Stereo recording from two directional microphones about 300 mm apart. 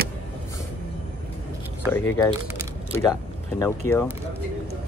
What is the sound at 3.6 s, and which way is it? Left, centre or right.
Speech, centre.